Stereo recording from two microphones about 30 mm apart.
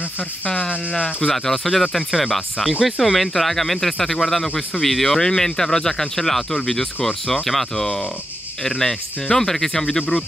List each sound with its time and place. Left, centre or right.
0.6 s speech: left
1.3 s speech: centre